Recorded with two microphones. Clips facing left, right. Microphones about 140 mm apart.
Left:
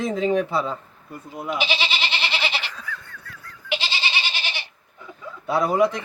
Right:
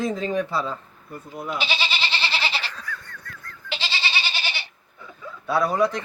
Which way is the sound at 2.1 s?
20° left (ahead or behind).